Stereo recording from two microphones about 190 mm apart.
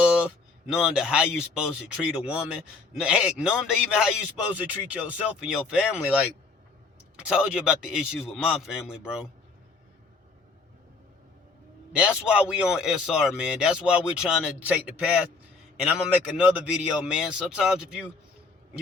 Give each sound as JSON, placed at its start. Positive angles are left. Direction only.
{"t": 0.0, "sound": "speech", "side_deg": -5}
{"t": 7.2, "sound": "speech", "side_deg": -5}
{"t": 11.9, "sound": "speech", "side_deg": -5}
{"t": 16.4, "sound": "speech", "side_deg": -5}